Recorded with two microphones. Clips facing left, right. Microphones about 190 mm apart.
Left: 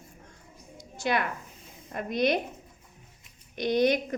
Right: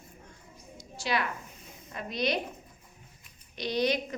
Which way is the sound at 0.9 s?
55° left (ahead or behind).